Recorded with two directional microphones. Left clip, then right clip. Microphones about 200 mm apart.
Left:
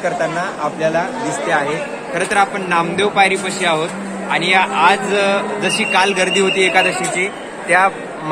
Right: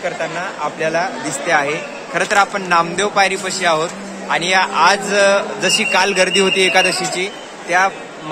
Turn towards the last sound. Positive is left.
turn(degrees=-15)  # may be behind; listen again after turning